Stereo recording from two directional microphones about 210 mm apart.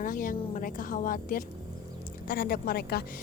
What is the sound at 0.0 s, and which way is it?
A woman's voice, 40° left (ahead or behind).